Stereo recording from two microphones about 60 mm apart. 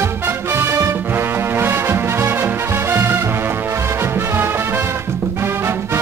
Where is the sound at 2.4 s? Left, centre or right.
Right.